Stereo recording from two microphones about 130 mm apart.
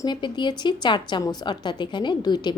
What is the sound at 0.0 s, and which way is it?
A woman's voice, 35° left (ahead or behind).